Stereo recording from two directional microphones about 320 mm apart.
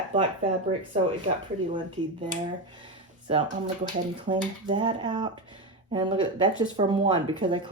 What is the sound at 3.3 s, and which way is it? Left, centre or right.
Speech, centre.